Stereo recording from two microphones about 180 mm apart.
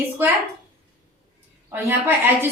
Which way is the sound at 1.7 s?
10° right (ahead or behind).